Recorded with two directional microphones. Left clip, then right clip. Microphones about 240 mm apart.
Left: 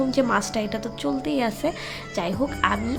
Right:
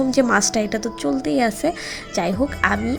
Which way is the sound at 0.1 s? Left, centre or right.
Centre.